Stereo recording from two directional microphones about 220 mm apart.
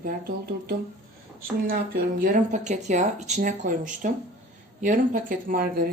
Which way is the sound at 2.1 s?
40° right (ahead or behind).